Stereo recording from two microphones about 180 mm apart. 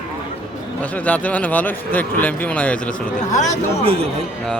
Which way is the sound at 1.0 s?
10° left (ahead or behind).